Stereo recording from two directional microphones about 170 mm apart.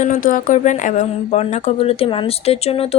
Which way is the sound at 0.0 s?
50° left (ahead or behind).